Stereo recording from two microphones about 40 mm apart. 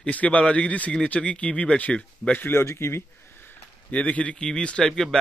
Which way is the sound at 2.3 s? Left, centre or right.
Left.